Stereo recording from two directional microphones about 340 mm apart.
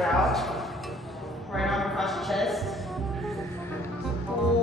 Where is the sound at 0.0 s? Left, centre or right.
Centre.